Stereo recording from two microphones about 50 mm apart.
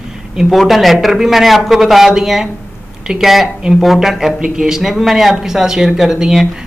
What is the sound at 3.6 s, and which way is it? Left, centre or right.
Speech, centre.